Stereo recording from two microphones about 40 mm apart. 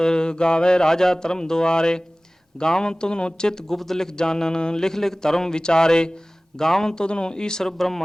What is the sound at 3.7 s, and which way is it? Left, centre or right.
Speech, centre.